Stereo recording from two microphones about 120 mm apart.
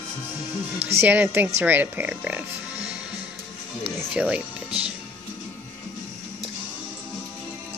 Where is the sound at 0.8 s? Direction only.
15° right (ahead or behind).